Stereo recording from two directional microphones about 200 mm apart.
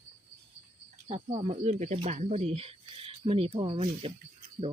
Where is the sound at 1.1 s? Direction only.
30° right (ahead or behind).